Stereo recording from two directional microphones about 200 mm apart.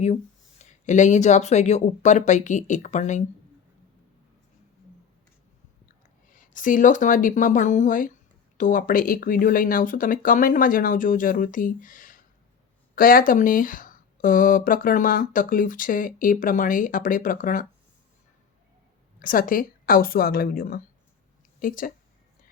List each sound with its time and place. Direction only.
0.6 s speech: 35° left (ahead or behind)
6.3 s speech: 40° left (ahead or behind)
19.2 s speech: 45° left (ahead or behind)